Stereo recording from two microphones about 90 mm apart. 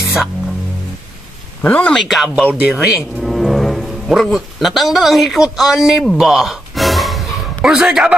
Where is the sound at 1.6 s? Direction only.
15° left (ahead or behind).